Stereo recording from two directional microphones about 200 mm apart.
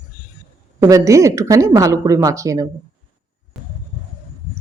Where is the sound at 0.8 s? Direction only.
15° right (ahead or behind).